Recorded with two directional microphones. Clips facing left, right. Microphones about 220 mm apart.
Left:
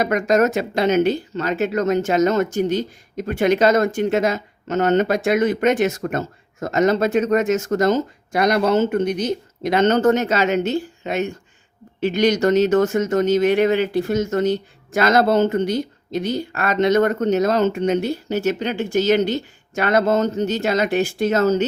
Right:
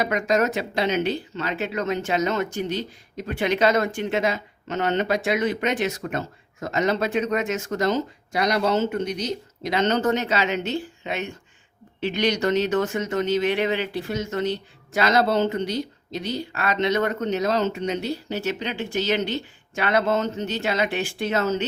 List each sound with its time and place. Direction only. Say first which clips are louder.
0.0 s speech: left 5 dB; 45° left (ahead or behind)